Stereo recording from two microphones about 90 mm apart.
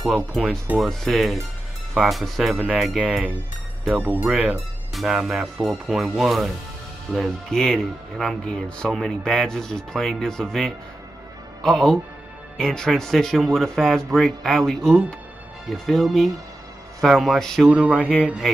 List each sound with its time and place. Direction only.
0.1 s speech: centre (ahead or behind)
4.0 s speech: 20° right (ahead or behind)
4.3 s speech: 5° right (ahead or behind)
17.6 s speech: 10° right (ahead or behind)